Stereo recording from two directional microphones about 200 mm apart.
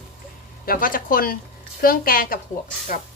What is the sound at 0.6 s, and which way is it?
A woman's voice, 45° left (ahead or behind).